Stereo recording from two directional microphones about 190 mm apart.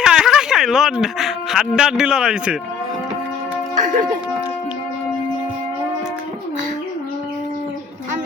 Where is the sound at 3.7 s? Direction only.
45° right (ahead or behind).